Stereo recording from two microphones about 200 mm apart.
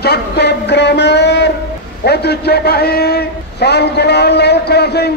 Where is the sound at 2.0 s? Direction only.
55° left (ahead or behind).